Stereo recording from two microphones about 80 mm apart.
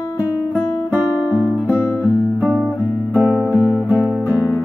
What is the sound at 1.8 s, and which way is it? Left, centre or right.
Music, left.